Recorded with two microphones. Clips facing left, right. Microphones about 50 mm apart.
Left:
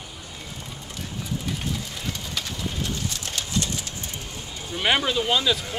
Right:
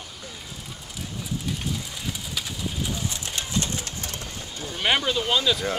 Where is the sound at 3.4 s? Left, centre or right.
Right.